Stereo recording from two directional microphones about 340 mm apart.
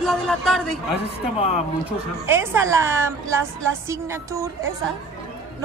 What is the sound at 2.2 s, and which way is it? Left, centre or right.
A woman's voice, centre.